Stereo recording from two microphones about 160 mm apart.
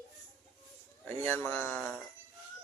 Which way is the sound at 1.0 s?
15° left (ahead or behind).